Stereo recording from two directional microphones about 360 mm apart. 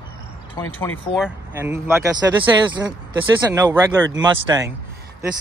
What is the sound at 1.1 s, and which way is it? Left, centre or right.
Speech, centre.